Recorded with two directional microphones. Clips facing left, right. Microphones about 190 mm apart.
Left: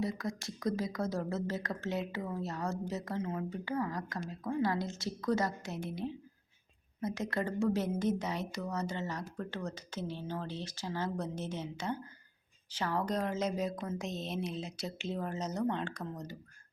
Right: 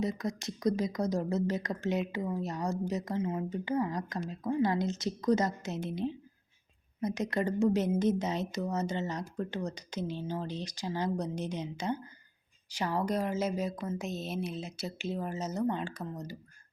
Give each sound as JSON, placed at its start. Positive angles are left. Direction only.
{"t": 0.0, "sound": "a woman's voice", "side_deg": -20}